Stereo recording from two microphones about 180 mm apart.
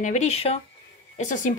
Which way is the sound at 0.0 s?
40° left (ahead or behind).